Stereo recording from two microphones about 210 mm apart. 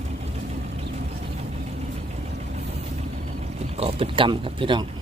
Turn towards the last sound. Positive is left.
turn(degrees=-25)  # may be behind; listen again after turning